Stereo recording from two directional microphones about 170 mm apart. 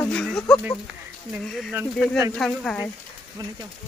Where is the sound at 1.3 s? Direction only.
Centre (ahead or behind).